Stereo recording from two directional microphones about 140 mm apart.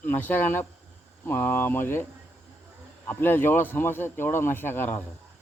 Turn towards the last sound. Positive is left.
turn(degrees=15)  # may be behind; listen again after turning